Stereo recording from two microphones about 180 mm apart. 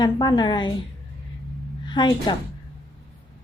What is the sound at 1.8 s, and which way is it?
Speech, 25° left (ahead or behind).